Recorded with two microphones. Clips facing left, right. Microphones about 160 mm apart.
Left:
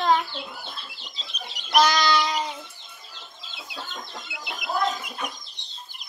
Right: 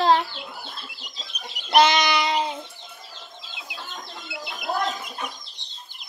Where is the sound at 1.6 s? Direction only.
20° right (ahead or behind).